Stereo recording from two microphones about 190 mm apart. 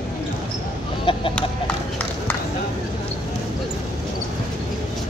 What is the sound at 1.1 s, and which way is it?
Chicken, 25° left (ahead or behind).